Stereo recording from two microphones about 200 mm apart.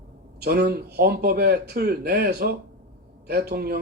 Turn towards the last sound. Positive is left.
turn(degrees=-50)  # may be behind; listen again after turning